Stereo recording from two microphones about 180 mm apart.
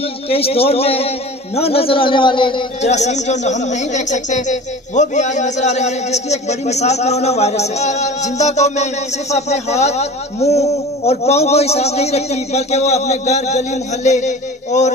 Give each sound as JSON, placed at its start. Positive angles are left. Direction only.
{"t": 0.3, "sound": "speech", "side_deg": 35}
{"t": 2.8, "sound": "speech", "side_deg": 40}